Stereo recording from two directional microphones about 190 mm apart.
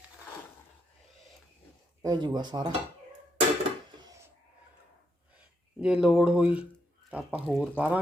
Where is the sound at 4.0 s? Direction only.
20° right (ahead or behind).